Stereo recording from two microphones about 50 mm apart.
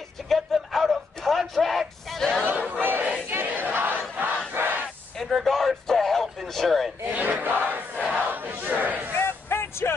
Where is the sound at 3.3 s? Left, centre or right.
Right.